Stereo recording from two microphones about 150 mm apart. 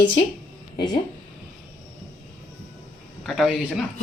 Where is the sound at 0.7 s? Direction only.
30° left (ahead or behind).